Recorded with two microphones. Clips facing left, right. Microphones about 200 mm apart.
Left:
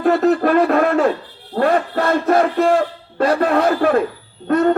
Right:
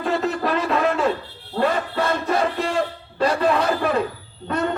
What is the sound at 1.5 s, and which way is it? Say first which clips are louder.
Music: left 5 dB; 55° left (ahead or behind).